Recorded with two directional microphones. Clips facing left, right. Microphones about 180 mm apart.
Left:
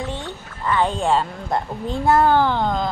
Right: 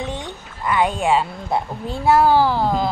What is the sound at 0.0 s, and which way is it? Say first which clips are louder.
Speech: right 1 dB; 15° right (ahead or behind).